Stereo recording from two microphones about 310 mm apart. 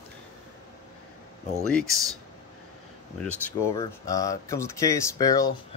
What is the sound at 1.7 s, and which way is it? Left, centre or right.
Speech, centre.